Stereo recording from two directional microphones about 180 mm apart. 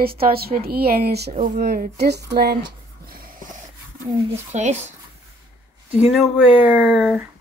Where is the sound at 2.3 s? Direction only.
65° right (ahead or behind); by 3.6 s 50° right (ahead or behind).